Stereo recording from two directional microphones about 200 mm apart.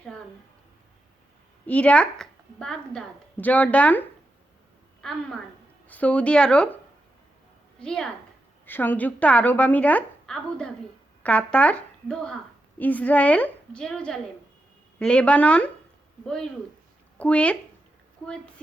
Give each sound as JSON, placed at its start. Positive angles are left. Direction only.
{"t": 1.6, "sound": "a woman's voice", "side_deg": 5}
{"t": 7.8, "sound": "a woman's voice", "side_deg": 5}